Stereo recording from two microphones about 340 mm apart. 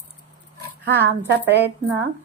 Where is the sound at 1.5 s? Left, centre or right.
Right.